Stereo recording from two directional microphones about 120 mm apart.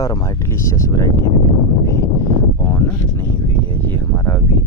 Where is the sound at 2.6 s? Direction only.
20° left (ahead or behind).